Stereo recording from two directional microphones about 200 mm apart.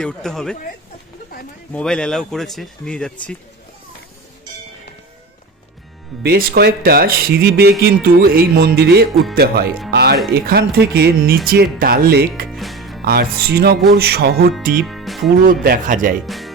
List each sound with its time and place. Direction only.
0.0 s speech: 5° left (ahead or behind)
1.7 s speech: 5° left (ahead or behind)
6.2 s speech: 50° right (ahead or behind)
9.9 s music: 55° right (ahead or behind)
10.4 s speech: 50° right (ahead or behind)
12.5 s music: centre (ahead or behind)
13.1 s speech: 50° right (ahead or behind)
14.8 s music: centre (ahead or behind)
15.6 s speech: 45° right (ahead or behind)
16.2 s speech: centre (ahead or behind)